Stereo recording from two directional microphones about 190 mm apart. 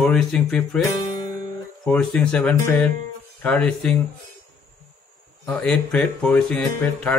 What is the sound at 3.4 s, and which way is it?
Music, 5° left (ahead or behind).